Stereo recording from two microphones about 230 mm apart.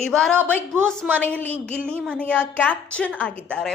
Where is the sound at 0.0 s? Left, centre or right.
Centre.